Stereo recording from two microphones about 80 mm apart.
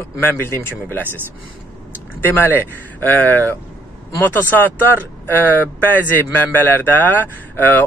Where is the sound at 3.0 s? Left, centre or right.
Left.